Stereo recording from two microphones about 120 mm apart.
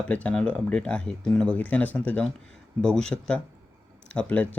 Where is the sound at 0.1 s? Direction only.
10° left (ahead or behind).